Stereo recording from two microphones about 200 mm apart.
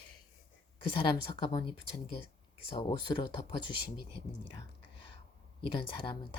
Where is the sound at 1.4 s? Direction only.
25° left (ahead or behind).